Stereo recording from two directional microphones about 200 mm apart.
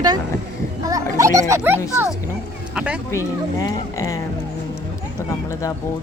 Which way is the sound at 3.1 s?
15° left (ahead or behind).